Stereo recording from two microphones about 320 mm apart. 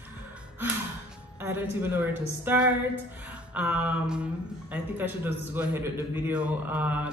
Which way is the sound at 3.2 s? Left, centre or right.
Centre.